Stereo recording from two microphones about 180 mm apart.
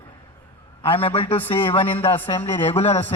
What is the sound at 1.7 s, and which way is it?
Speech, 30° left (ahead or behind).